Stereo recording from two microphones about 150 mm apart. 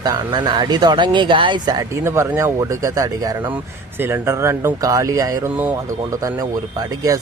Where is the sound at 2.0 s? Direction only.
15° right (ahead or behind).